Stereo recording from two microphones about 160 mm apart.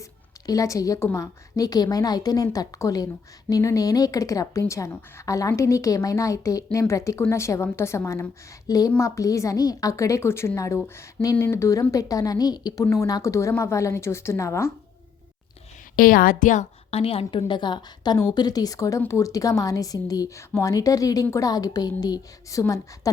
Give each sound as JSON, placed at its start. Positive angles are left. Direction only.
{"t": 0.0, "sound": "a woman's voice", "side_deg": 20}
{"t": 16.0, "sound": "a woman's voice", "side_deg": 60}